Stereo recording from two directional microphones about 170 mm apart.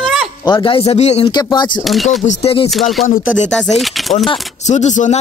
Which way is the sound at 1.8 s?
Centre (ahead or behind).